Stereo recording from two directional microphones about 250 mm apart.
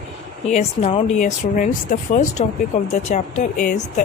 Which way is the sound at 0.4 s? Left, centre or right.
Left.